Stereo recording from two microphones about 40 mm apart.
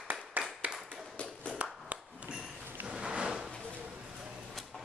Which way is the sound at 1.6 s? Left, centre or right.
Right.